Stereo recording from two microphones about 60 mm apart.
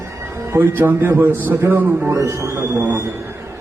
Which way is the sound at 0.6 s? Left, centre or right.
Right.